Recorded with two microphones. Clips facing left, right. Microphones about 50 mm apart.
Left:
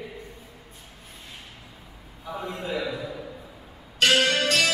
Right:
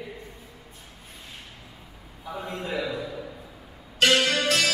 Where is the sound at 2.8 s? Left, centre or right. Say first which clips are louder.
Even; centre.